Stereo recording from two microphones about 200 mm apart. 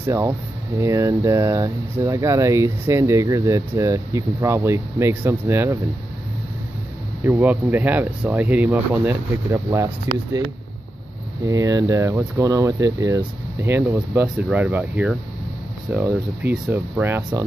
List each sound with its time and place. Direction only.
0.0 s speech: 15° right (ahead or behind)
7.2 s speech: 10° right (ahead or behind)
11.4 s speech: 15° right (ahead or behind)